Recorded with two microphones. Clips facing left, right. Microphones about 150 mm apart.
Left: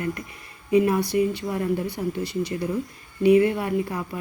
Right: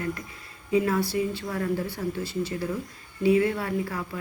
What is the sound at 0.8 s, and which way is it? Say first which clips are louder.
Speech: left 4 dB; 15° left (ahead or behind).